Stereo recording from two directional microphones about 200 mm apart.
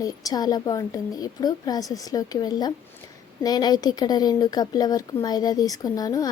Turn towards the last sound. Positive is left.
turn(degrees=20)  # may be behind; listen again after turning